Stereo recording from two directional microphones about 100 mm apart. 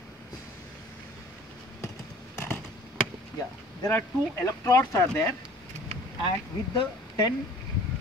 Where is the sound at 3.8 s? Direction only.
30° left (ahead or behind).